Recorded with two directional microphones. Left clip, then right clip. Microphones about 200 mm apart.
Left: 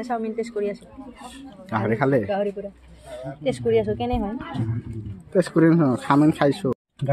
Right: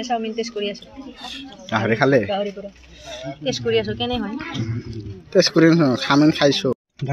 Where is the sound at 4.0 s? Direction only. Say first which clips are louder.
Right 2 dB; 25° left (ahead or behind).